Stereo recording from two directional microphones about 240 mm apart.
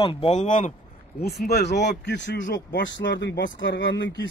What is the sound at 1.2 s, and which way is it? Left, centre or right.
Speech, left.